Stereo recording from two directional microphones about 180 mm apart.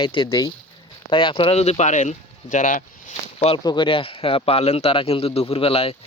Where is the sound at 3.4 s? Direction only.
30° left (ahead or behind).